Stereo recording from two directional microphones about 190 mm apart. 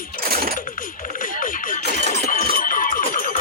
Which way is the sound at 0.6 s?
45° left (ahead or behind).